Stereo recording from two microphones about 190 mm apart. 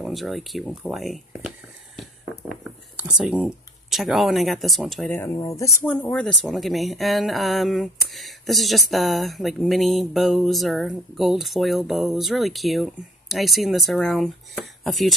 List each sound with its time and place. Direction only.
0.0 s speech: centre (ahead or behind)
2.0 s a sound: centre (ahead or behind)
5.1 s speech: 10° left (ahead or behind)